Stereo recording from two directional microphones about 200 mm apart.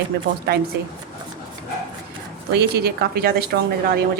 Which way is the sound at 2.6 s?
50° right (ahead or behind).